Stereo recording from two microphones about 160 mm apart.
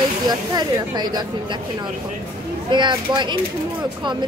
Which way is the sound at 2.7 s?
30° right (ahead or behind).